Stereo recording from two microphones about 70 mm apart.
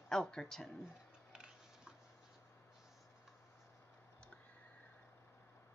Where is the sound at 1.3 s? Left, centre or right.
Centre.